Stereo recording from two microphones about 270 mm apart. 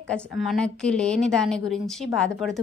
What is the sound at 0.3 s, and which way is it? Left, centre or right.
A woman's voice, centre.